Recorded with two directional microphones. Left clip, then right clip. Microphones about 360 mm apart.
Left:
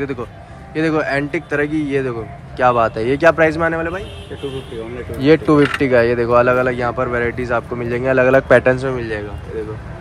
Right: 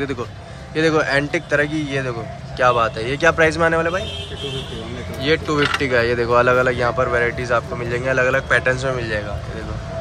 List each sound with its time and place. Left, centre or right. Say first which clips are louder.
0.0 s speech: left 1 dB; centre
5.2 s speech: left 6 dB; centre